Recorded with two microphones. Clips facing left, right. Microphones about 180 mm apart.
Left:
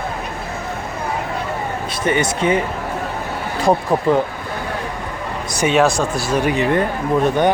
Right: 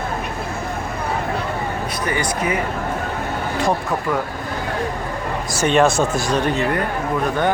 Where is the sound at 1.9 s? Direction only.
25° left (ahead or behind).